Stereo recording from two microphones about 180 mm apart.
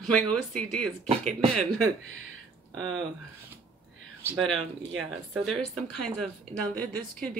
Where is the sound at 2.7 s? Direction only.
5° left (ahead or behind).